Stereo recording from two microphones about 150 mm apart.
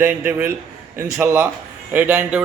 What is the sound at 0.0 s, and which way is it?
A man's voice, 10° right (ahead or behind).